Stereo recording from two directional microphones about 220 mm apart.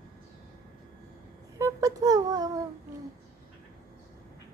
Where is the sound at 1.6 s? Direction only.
15° right (ahead or behind).